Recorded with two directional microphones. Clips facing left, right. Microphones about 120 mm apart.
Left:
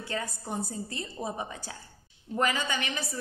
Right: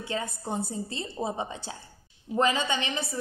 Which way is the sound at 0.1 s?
25° right (ahead or behind).